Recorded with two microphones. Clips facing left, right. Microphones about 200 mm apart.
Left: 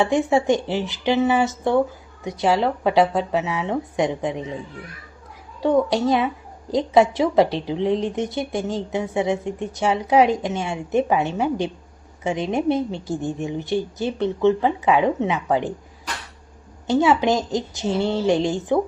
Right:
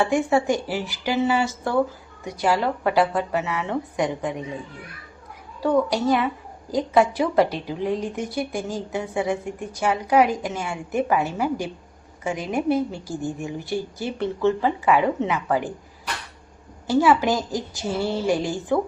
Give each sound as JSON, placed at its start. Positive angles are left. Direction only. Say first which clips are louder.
{"t": 0.0, "sound": "a woman's voice", "louder": "left 2 dB", "side_deg": 25}
{"t": 5.6, "sound": "a woman's voice", "louder": "left 2 dB", "side_deg": 25}
{"t": 16.8, "sound": "a woman's voice", "louder": "left 1 dB", "side_deg": 20}